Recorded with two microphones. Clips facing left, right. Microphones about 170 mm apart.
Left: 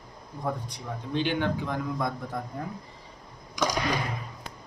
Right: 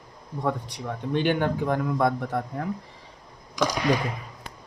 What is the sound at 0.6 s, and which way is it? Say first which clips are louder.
Speech: right 5 dB; 70° right (ahead or behind).